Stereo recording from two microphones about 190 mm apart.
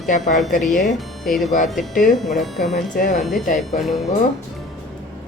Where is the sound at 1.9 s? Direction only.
45° left (ahead or behind).